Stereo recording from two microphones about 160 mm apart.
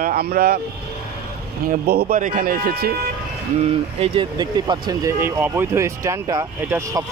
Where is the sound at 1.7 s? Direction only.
70° right (ahead or behind).